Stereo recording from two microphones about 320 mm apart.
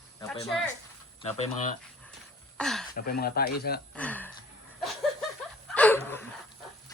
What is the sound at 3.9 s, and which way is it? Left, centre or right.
Speech, centre.